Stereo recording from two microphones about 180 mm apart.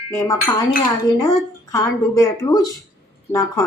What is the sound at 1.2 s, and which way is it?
Speech, 20° left (ahead or behind).